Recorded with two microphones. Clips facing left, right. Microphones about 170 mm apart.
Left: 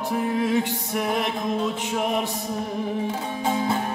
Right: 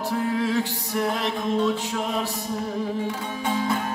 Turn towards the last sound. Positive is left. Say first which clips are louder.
# left 1 dB
turn(degrees=25)  # may be behind; listen again after turning